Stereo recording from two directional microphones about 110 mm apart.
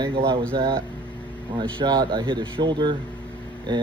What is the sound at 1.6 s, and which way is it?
Speech, 40° right (ahead or behind).